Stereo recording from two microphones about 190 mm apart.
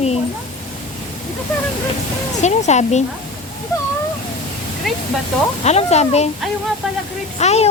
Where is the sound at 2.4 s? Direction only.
35° left (ahead or behind).